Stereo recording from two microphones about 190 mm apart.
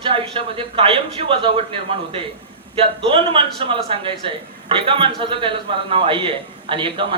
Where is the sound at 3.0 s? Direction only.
25° right (ahead or behind).